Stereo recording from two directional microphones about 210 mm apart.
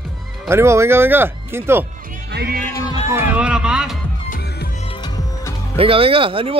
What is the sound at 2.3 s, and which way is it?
Speech, 45° right (ahead or behind).